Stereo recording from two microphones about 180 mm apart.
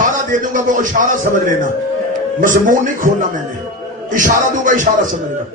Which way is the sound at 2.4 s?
45° right (ahead or behind).